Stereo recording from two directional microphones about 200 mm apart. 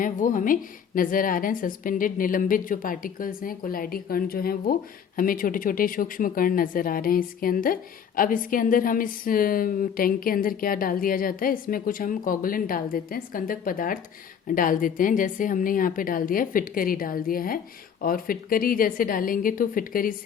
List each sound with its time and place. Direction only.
0.0 s a woman's voice: 40° left (ahead or behind)